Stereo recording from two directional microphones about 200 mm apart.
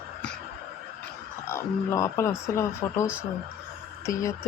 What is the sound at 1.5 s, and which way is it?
Speech, 15° left (ahead or behind).